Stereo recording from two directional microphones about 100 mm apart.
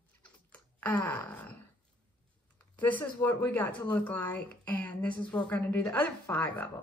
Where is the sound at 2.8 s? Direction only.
15° left (ahead or behind).